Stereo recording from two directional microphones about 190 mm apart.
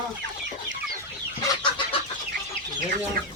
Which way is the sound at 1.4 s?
25° left (ahead or behind).